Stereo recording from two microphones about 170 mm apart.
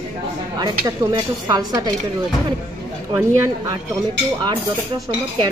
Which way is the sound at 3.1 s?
15° right (ahead or behind).